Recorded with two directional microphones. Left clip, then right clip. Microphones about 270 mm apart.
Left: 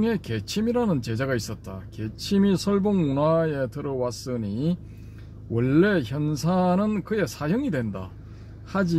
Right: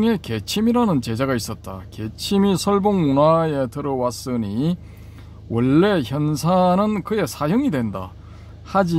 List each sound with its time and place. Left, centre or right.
0.0 s a man's voice: right